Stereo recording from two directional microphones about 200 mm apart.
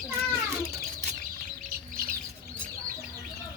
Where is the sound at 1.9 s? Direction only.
45° right (ahead or behind).